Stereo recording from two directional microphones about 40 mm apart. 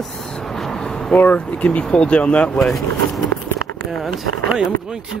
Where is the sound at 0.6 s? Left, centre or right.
Centre.